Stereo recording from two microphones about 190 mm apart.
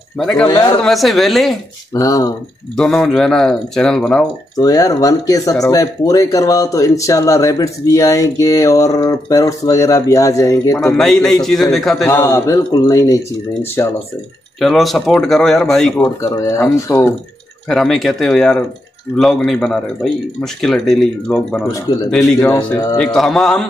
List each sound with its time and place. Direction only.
0.2 s speech: centre (ahead or behind)
0.5 s speech: 20° left (ahead or behind)
0.8 s speech: centre (ahead or behind)
2.0 s speech: 15° left (ahead or behind)
2.7 s speech: centre (ahead or behind)
4.6 s speech: 20° left (ahead or behind)
10.9 s speech: centre (ahead or behind)
12.1 s speech: 15° left (ahead or behind)
14.6 s speech: centre (ahead or behind)
16.2 s speech: 15° left (ahead or behind)
17.6 s speech: centre (ahead or behind)
22.4 s speech: 15° left (ahead or behind)
22.9 s speech: 5° left (ahead or behind)